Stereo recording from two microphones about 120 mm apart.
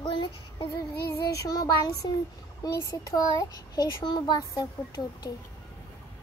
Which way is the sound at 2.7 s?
25° left (ahead or behind).